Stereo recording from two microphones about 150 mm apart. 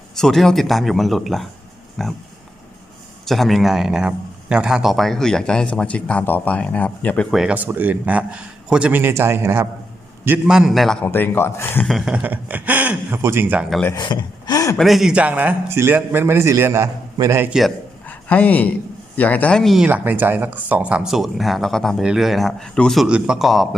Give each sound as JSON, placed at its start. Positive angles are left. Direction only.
{"t": 0.2, "sound": "a man's voice", "side_deg": 0}
{"t": 3.2, "sound": "a man's voice", "side_deg": 0}
{"t": 11.0, "sound": "speech", "side_deg": 15}
{"t": 11.9, "sound": "a man's voice", "side_deg": -5}
{"t": 13.9, "sound": "speech", "side_deg": 30}
{"t": 14.8, "sound": "a man's voice", "side_deg": 0}
{"t": 18.0, "sound": "a sound", "side_deg": 10}
{"t": 19.1, "sound": "speech", "side_deg": 10}
{"t": 19.9, "sound": "a man's voice", "side_deg": -10}